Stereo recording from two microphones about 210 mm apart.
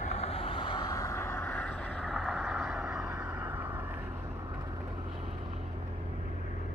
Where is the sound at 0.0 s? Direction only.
30° left (ahead or behind); by 3.6 s 5° right (ahead or behind).